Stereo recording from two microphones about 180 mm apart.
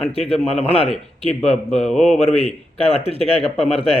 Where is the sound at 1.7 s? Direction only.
5° left (ahead or behind).